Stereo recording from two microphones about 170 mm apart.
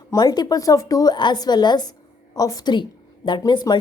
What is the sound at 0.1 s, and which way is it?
A woman's voice, 20° left (ahead or behind).